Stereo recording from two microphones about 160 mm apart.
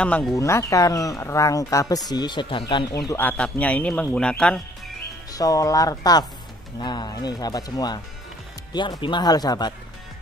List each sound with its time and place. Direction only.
0.0 s speech: 5° left (ahead or behind)
0.3 s speech: 20° left (ahead or behind)
5.3 s speech: 20° left (ahead or behind)